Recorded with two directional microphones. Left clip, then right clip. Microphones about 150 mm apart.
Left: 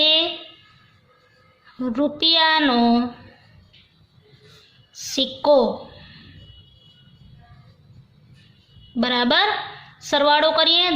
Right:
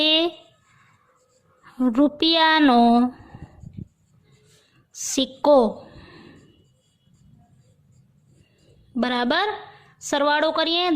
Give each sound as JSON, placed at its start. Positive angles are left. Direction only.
{"t": 0.0, "sound": "a sound", "side_deg": -65}
{"t": 1.6, "sound": "speech", "side_deg": -75}
{"t": 5.1, "sound": "a woman's voice", "side_deg": -65}
{"t": 9.0, "sound": "a woman's voice", "side_deg": -60}